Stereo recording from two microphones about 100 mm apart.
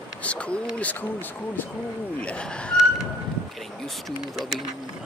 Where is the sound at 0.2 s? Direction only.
10° left (ahead or behind).